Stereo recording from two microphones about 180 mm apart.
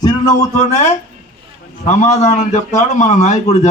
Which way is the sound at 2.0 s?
40° left (ahead or behind).